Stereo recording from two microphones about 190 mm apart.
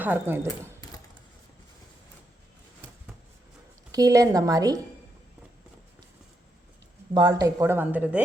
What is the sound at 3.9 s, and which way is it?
Speech, 20° right (ahead or behind).